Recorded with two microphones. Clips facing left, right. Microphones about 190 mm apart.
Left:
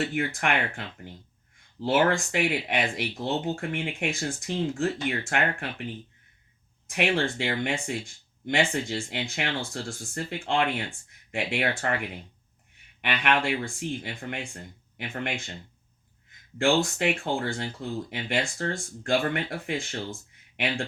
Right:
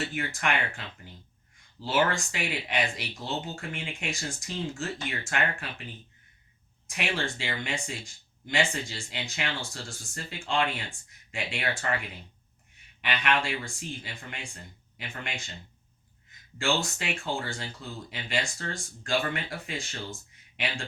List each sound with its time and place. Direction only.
0.1 s speech: 60° left (ahead or behind)
1.8 s speech: 60° left (ahead or behind)
6.8 s speech: 60° left (ahead or behind)
13.0 s speech: 60° left (ahead or behind)
16.6 s speech: 55° left (ahead or behind)